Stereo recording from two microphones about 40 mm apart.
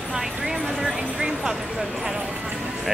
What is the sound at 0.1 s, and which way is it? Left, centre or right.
Vehicle, centre.